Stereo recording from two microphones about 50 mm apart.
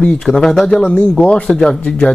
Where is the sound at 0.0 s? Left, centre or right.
Centre.